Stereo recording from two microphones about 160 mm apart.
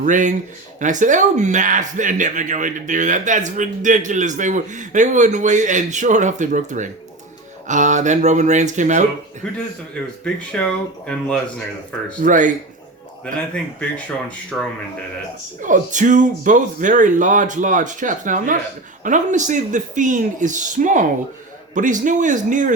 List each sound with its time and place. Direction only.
0.0 s speech: 50° right (ahead or behind)
10.2 s speech: 5° left (ahead or behind)
12.2 s speech: 55° right (ahead or behind)
13.5 s speech: 5° left (ahead or behind)
15.6 s speech: 50° right (ahead or behind)